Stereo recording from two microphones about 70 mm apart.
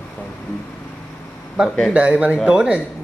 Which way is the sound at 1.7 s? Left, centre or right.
Centre.